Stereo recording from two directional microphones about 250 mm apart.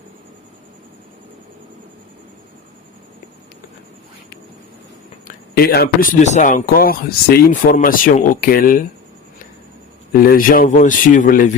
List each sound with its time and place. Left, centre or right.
5.3 s speech: left
10.1 s speech: left